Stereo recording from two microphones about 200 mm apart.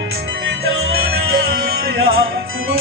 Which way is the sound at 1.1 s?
55° right (ahead or behind).